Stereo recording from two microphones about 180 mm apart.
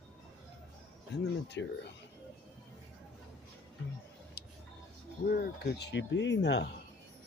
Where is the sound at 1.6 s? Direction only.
90° left.